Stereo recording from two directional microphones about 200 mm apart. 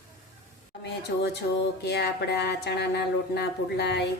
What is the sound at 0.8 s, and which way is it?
Speech, 55° left (ahead or behind).